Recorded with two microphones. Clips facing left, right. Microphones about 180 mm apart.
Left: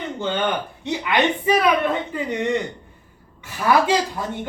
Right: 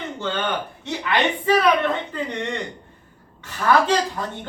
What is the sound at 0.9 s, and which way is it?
Speech, 15° left (ahead or behind).